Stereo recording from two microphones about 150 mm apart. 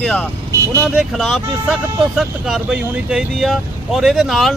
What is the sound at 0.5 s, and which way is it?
Vehicle, 20° right (ahead or behind).